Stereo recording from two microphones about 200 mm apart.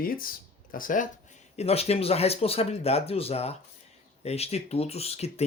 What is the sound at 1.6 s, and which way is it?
Speech, 30° left (ahead or behind).